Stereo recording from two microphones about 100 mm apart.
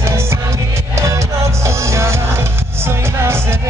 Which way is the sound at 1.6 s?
30° right (ahead or behind).